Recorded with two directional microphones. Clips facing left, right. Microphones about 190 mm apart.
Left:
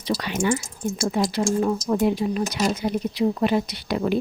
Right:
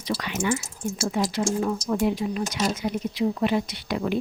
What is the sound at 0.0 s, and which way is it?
Speech, 30° left (ahead or behind).